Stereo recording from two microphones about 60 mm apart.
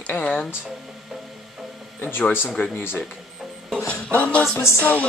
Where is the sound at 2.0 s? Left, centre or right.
Left.